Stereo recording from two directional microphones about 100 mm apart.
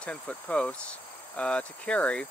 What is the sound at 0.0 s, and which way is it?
Speech, 10° left (ahead or behind).